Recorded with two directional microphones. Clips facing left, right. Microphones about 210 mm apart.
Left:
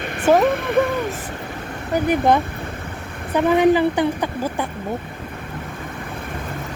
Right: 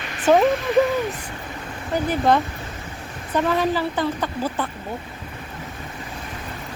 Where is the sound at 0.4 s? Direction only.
55° left (ahead or behind).